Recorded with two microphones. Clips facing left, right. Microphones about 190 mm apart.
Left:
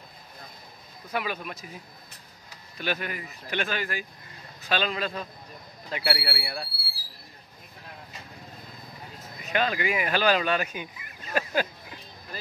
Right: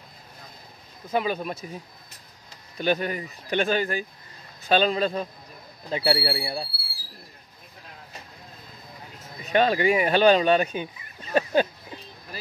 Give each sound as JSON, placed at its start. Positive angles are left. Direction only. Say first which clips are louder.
{"t": 1.1, "sound": "speech", "louder": "right 6 dB", "side_deg": -30}
{"t": 2.8, "sound": "speech", "louder": "right 7 dB", "side_deg": -35}
{"t": 9.5, "sound": "speech", "louder": "right 6 dB", "side_deg": -30}